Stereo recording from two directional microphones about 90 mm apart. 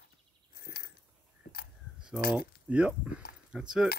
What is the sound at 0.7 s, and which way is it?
Biting, 25° right (ahead or behind).